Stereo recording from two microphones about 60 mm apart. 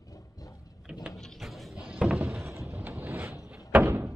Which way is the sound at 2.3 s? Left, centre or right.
Right.